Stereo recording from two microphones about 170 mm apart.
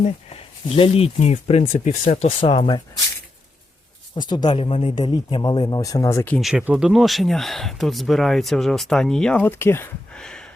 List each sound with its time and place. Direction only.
0.0 s speech: 35° left (ahead or behind)
4.1 s speech: 25° left (ahead or behind)
6.4 s speech: 5° right (ahead or behind)